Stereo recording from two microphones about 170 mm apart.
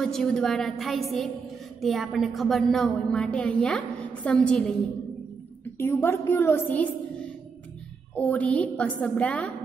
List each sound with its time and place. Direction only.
0.0 s a woman's voice: 5° left (ahead or behind)
5.8 s a woman's voice: 15° left (ahead or behind)